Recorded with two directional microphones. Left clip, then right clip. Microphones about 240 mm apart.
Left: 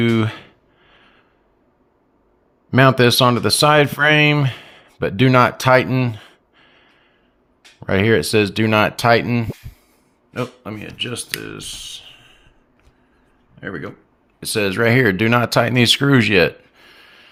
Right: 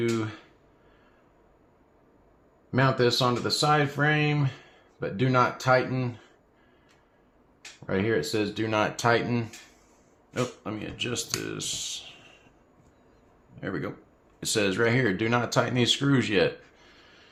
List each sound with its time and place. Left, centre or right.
0.1 s speech: left
2.6 s speech: left
7.9 s speech: left; by 12.4 s centre
13.6 s speech: centre
14.3 s speech: left